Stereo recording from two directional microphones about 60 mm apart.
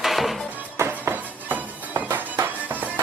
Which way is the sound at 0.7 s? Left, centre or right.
Right.